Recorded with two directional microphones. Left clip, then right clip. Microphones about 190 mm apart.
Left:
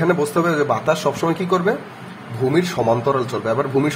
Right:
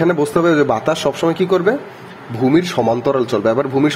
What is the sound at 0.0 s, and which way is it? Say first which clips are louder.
A man's voice: right 3 dB; 30° right (ahead or behind).